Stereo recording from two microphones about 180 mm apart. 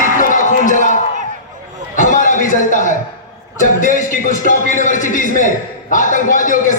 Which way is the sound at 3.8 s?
45° left (ahead or behind).